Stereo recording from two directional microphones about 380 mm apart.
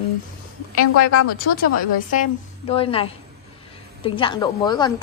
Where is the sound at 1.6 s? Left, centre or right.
Left.